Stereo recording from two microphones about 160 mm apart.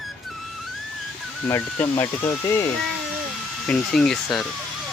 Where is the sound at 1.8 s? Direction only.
15° left (ahead or behind).